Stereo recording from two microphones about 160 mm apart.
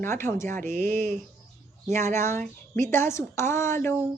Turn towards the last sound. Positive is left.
turn(degrees=15)  # may be behind; listen again after turning